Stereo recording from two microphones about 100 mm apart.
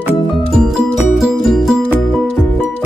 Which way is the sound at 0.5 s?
Centre (ahead or behind).